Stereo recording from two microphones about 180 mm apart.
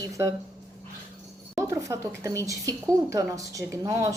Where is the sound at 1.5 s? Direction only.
15° right (ahead or behind).